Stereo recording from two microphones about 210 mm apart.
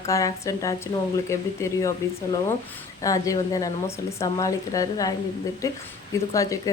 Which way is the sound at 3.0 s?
15° left (ahead or behind).